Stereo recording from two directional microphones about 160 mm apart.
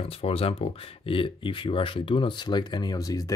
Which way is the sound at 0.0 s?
40° left (ahead or behind).